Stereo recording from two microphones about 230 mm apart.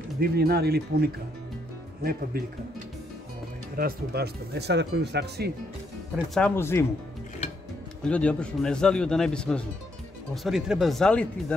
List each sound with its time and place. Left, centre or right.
0.2 s speech: right
2.3 s speech: right
3.7 s speech: right
6.3 s speech: centre
8.0 s a man's voice: centre